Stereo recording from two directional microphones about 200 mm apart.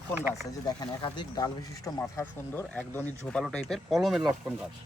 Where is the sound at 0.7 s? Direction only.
20° left (ahead or behind); by 4.2 s centre (ahead or behind).